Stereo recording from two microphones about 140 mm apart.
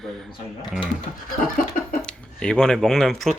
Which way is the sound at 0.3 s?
35° left (ahead or behind).